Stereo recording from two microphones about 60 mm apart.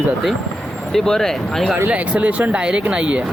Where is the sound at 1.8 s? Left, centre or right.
Right.